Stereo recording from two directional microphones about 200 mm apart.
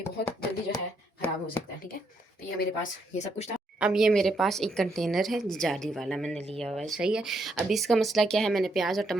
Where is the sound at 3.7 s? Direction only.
5° right (ahead or behind).